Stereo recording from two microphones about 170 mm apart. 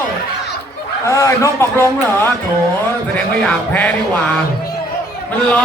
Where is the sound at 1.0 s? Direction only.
20° left (ahead or behind).